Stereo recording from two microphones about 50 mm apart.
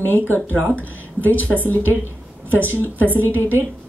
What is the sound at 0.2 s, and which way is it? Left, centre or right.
A woman's voice, left.